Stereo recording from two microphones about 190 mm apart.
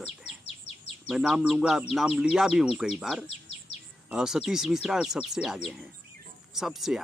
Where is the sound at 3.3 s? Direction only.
35° left (ahead or behind).